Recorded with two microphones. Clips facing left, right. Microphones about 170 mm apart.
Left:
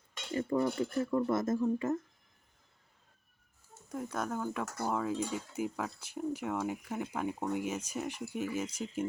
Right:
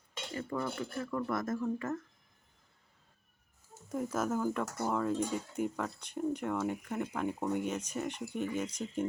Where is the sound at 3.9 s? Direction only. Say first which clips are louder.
Right 3 dB; centre (ahead or behind).